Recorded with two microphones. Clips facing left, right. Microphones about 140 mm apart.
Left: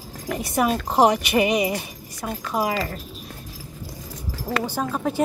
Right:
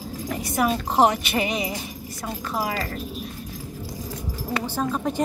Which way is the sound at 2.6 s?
20° left (ahead or behind).